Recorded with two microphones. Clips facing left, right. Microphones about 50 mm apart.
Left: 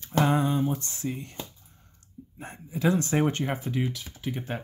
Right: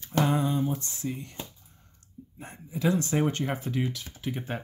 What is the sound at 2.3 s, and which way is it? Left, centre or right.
Speech, left.